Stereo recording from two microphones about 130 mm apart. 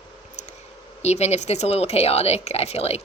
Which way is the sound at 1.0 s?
55° left (ahead or behind).